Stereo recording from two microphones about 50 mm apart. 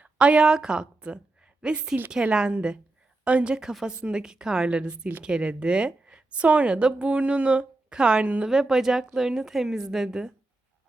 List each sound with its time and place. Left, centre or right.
0.0 s a woman's voice: right
8.4 s a woman's voice: centre